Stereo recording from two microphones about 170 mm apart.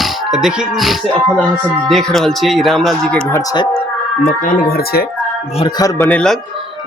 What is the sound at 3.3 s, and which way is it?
Speech, 20° left (ahead or behind).